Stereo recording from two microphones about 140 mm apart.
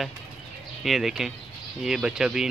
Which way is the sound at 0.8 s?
5° right (ahead or behind).